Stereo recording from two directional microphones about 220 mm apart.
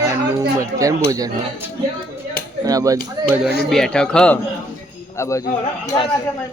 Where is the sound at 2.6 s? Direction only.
15° right (ahead or behind).